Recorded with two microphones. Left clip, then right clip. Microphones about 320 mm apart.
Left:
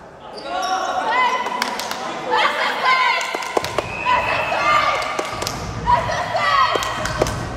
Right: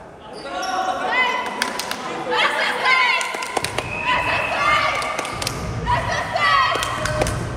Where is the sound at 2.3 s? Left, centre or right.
Left.